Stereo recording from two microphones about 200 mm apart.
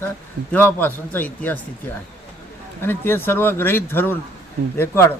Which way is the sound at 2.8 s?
10° left (ahead or behind).